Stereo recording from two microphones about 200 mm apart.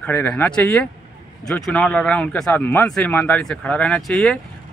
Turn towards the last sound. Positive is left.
turn(degrees=0)  # may be behind; listen again after turning